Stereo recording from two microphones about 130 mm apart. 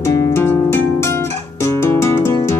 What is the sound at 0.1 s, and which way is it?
Music, 20° left (ahead or behind).